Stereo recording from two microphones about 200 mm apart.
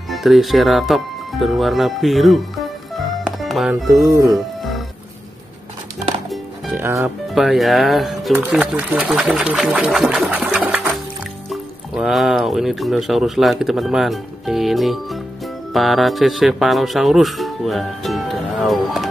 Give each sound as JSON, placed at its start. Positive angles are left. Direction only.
{"t": 0.1, "sound": "speech", "side_deg": 0}
{"t": 3.3, "sound": "music", "side_deg": 0}
{"t": 7.0, "sound": "speech", "side_deg": 0}